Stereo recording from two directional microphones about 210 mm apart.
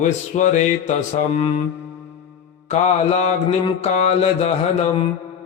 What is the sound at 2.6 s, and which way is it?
Mantra, 30° left (ahead or behind).